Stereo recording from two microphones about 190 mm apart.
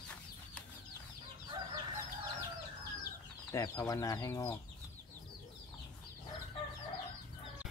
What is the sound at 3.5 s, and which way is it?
Speech, 20° left (ahead or behind).